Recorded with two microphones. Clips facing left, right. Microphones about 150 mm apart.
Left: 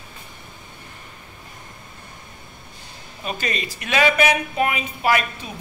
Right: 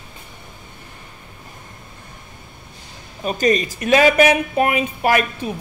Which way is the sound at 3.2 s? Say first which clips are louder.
Right 9 dB; 45° right (ahead or behind).